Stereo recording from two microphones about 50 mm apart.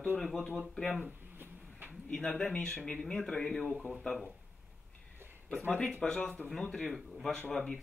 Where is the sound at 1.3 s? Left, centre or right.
Right.